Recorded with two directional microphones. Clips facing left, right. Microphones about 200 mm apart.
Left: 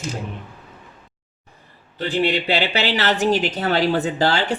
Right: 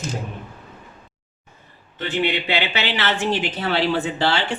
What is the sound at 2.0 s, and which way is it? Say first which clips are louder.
A woman's voice: left 2 dB; 35° left (ahead or behind).